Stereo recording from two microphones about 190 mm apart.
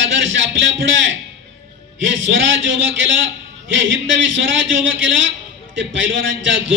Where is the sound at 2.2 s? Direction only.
80° right.